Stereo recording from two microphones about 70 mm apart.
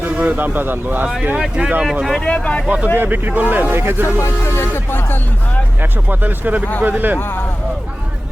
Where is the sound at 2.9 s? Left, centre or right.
Right.